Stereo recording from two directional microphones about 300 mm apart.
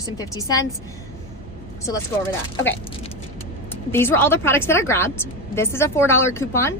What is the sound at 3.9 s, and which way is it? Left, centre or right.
A woman's voice, centre.